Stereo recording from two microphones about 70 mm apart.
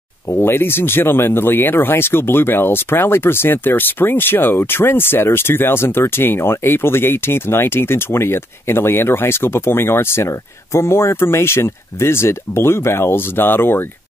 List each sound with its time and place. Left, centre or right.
0.3 s speech: left